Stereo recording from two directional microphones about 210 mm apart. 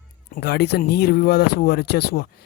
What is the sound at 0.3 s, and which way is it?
Speech, 50° left (ahead or behind).